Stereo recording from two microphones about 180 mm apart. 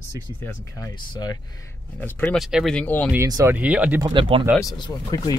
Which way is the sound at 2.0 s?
10° left (ahead or behind).